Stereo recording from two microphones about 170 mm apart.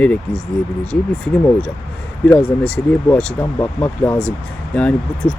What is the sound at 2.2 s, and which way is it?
Speech, 5° left (ahead or behind).